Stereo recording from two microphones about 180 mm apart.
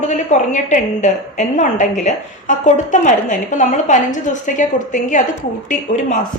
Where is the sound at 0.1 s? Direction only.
40° left (ahead or behind).